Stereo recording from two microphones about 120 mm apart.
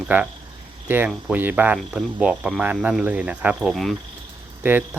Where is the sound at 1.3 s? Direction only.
15° right (ahead or behind).